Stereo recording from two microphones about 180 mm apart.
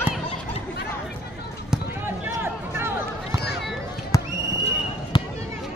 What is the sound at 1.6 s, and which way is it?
Basketball bounce, 10° right (ahead or behind).